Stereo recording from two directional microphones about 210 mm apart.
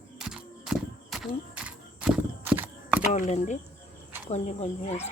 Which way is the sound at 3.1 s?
35° left (ahead or behind).